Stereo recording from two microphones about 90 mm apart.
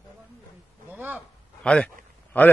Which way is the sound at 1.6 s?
10° left (ahead or behind).